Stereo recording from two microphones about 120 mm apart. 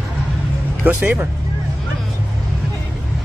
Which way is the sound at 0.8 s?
15° right (ahead or behind).